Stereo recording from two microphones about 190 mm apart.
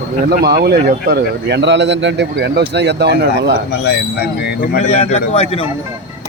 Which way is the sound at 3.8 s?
60° left (ahead or behind).